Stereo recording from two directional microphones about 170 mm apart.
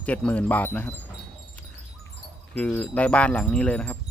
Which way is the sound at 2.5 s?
5° left (ahead or behind).